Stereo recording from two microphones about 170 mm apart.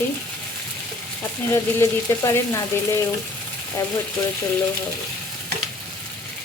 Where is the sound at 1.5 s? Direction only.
15° left (ahead or behind).